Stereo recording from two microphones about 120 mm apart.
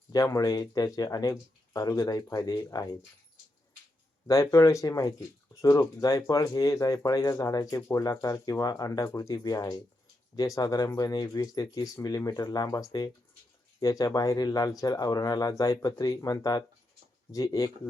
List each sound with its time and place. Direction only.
0.1 s speech: 30° left (ahead or behind)
4.3 s speech: 30° left (ahead or behind)